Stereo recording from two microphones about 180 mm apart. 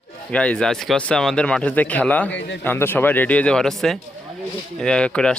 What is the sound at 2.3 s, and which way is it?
Speech, 85° left.